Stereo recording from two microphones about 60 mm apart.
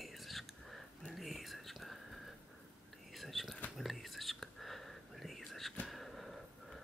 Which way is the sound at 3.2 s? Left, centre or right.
Centre.